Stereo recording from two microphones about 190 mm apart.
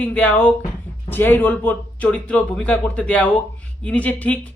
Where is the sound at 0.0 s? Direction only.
5° left (ahead or behind).